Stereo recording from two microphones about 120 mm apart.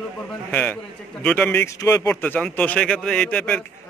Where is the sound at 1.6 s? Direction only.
25° left (ahead or behind).